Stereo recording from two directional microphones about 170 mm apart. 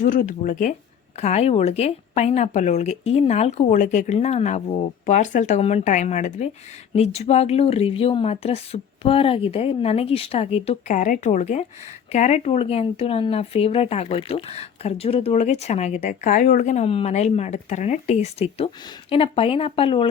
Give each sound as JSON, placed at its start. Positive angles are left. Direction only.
{"t": 0.0, "sound": "speech", "side_deg": 50}
{"t": 1.2, "sound": "speech", "side_deg": 40}